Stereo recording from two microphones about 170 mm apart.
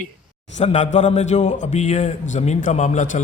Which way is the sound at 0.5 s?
45° left (ahead or behind).